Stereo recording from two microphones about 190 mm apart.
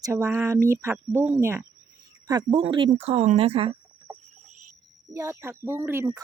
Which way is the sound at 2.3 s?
25° right (ahead or behind).